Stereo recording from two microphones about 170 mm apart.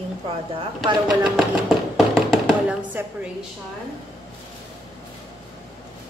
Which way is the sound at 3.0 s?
15° right (ahead or behind).